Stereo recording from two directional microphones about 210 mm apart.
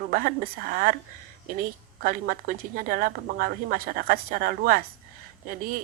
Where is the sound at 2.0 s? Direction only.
45° right (ahead or behind).